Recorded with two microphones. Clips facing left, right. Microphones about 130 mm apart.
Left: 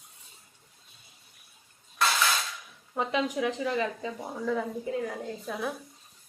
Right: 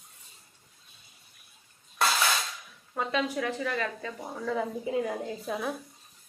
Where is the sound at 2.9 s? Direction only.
15° left (ahead or behind).